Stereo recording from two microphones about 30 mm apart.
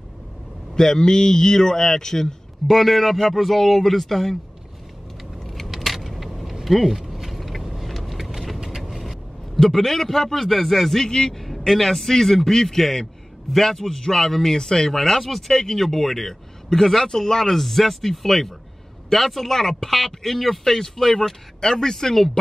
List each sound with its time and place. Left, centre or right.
0.7 s speech: centre
2.7 s a man's voice: centre
5.7 s keys jangling: centre
6.6 s vehicle: centre
9.6 s a man's voice: centre
11.1 s speech: left
11.4 s a man's voice: centre
15.0 s a man's voice: centre
15.5 s a man's voice: centre
20.7 s a man's voice: centre